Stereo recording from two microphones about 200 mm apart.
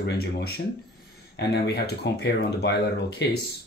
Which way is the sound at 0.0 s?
55° left (ahead or behind).